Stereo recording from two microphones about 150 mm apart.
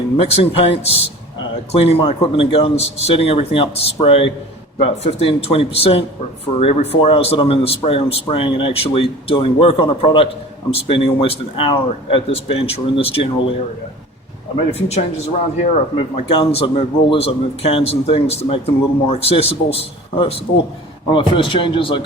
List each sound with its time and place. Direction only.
0.2 s a man's voice: 40° left (ahead or behind)
14.7 s speech: 45° left (ahead or behind)
16.1 s a man's voice: 40° left (ahead or behind)